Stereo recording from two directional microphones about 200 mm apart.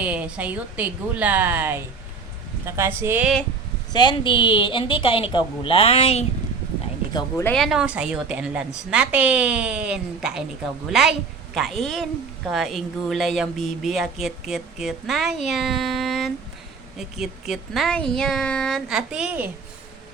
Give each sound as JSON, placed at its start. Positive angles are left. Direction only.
{"t": 0.0, "sound": "a woman's voice", "side_deg": -5}
{"t": 3.9, "sound": "a woman's voice", "side_deg": 25}
{"t": 7.4, "sound": "speech", "side_deg": 0}
{"t": 11.5, "sound": "speech", "side_deg": 0}